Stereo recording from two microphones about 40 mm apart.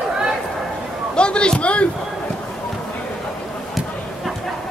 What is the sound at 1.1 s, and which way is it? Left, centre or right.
Speech, left.